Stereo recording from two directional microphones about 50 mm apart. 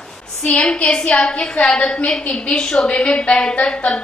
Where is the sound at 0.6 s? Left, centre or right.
Centre.